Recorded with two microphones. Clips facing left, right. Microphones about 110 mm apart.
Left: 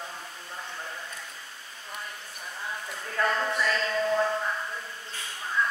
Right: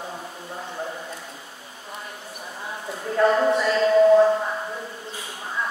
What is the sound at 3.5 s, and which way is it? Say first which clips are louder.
Music: right 10 dB; 25° right (ahead or behind).